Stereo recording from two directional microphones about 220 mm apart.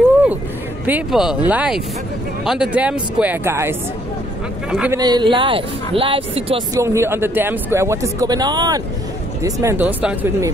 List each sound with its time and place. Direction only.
0.8 s speech: 5° right (ahead or behind)
4.9 s speech: 20° right (ahead or behind)
6.8 s speech: 10° right (ahead or behind)